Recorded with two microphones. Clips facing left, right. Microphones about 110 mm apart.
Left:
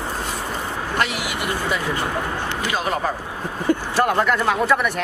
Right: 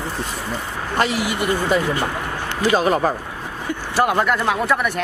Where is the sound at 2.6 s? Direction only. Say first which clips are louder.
Right 8 dB; 40° right (ahead or behind).